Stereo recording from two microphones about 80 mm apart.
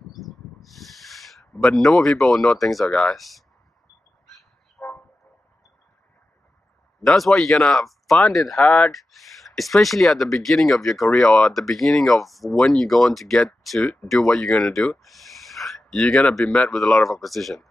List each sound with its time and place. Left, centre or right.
0.1 s a sound: centre
1.6 s speech: centre
4.8 s vehicle: left
7.0 s speech: centre
8.6 s speech: centre
8.9 s speech: centre